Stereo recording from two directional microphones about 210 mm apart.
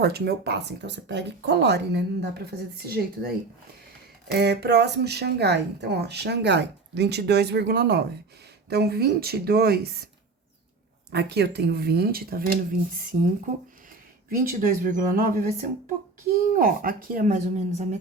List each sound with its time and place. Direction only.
0.0 s speech: 50° right (ahead or behind)
11.1 s speech: 50° right (ahead or behind); by 17.8 s 35° right (ahead or behind)